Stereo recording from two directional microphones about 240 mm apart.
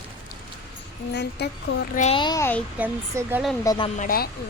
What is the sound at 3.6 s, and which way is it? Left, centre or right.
Speech, centre.